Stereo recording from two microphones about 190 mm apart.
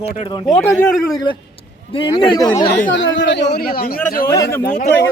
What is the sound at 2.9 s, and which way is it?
A man's voice, 75° left (ahead or behind).